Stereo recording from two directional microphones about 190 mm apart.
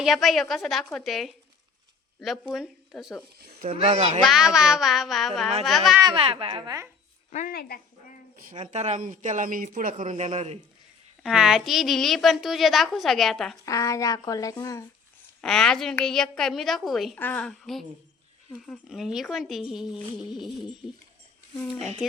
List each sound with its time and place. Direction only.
0.0 s a woman's voice: centre (ahead or behind)
3.3 s speech: 55° right (ahead or behind)
3.7 s speech: 30° right (ahead or behind)
4.2 s a woman's voice: centre (ahead or behind)
6.0 s a woman's voice: 25° right (ahead or behind)
7.3 s speech: 40° left (ahead or behind)
7.5 s speech: 55° left (ahead or behind)
8.4 s speech: 45° right (ahead or behind)
8.6 s speech: 35° right (ahead or behind)
11.2 s a woman's voice: centre (ahead or behind)
13.7 s speech: 15° left (ahead or behind)
15.4 s a woman's voice: 5° left (ahead or behind)